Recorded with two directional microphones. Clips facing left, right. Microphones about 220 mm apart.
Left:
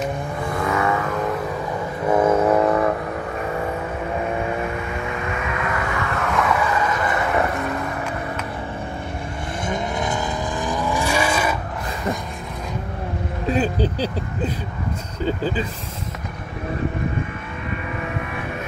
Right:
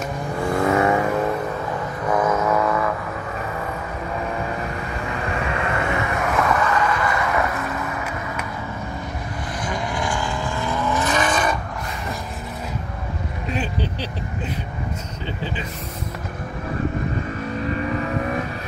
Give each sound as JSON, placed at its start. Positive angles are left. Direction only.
{"t": 0.7, "sound": "vehicle", "side_deg": -30}
{"t": 2.0, "sound": "vehicle", "side_deg": 25}
{"t": 5.2, "sound": "vehicle", "side_deg": -35}
{"t": 6.3, "sound": "vehicle", "side_deg": 0}
{"t": 6.7, "sound": "a sound", "side_deg": 25}
{"t": 9.7, "sound": "vehicle", "side_deg": 25}
{"t": 15.2, "sound": "vehicle", "side_deg": 40}
{"t": 17.6, "sound": "vehicle", "side_deg": -35}